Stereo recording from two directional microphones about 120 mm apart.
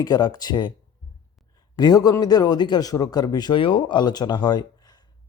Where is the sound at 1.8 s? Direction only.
35° left (ahead or behind).